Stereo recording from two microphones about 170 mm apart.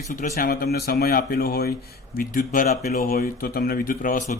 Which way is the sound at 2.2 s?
55° left (ahead or behind).